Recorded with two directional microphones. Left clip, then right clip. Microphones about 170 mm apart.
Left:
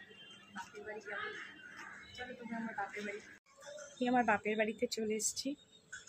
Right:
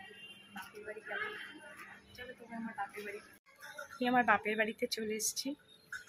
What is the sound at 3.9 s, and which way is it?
Speech, 10° left (ahead or behind).